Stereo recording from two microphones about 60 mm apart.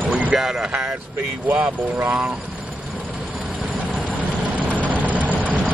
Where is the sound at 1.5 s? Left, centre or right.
Right.